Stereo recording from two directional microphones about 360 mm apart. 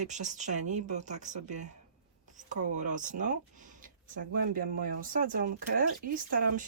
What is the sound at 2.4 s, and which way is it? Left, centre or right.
Speech, right.